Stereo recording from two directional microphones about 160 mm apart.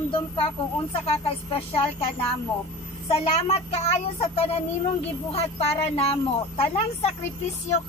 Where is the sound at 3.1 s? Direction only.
40° left (ahead or behind).